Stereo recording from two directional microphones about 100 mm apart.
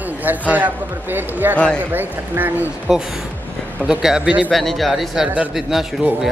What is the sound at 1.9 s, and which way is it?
Speech, 20° right (ahead or behind).